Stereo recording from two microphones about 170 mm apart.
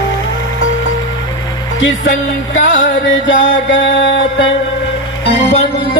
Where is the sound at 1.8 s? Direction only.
90° left.